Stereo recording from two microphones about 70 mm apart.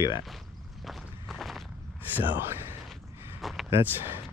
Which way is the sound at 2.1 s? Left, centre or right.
Right.